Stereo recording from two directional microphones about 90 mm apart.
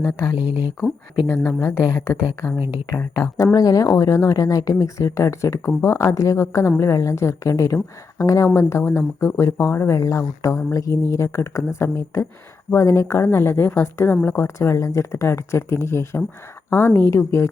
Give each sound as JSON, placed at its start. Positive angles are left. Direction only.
{"t": 0.3, "sound": "speech", "side_deg": -15}
{"t": 1.5, "sound": "speech", "side_deg": 30}